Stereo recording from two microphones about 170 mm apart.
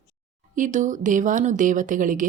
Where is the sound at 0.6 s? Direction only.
45° right (ahead or behind).